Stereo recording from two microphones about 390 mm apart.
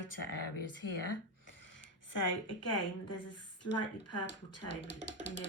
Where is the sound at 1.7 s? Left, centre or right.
Left.